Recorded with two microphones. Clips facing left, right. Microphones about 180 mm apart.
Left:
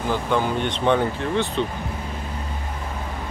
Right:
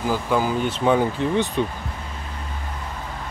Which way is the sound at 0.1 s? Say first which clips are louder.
Even; 5° right (ahead or behind).